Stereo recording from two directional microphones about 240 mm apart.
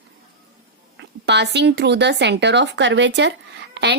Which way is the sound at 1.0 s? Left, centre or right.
Right.